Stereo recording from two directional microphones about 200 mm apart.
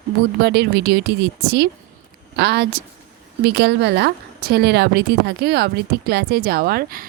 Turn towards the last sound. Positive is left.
turn(degrees=-45)  # may be behind; listen again after turning